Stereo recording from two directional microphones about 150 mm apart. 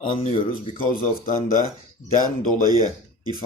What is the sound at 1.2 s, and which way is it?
Speech, 70° left (ahead or behind).